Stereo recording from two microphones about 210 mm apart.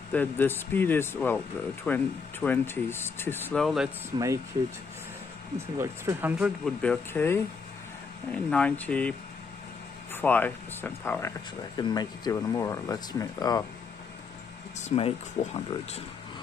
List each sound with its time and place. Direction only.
0.1 s speech: 10° left (ahead or behind)
4.1 s speech: 20° right (ahead or behind)
5.8 s speech: 10° right (ahead or behind); by 9.1 s 5° left (ahead or behind)
10.1 s speech: 10° left (ahead or behind)
14.8 s speech: 30° left (ahead or behind)